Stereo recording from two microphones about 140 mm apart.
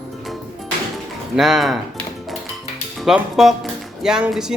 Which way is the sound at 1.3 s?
Centre (ahead or behind).